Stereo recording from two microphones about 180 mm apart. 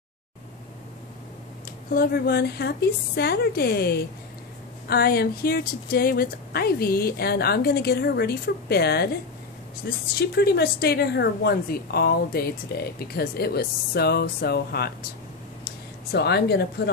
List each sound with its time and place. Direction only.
1.9 s a woman's voice: 55° left (ahead or behind)